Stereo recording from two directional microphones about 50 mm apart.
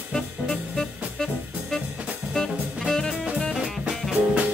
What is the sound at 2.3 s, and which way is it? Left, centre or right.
Jazz, centre.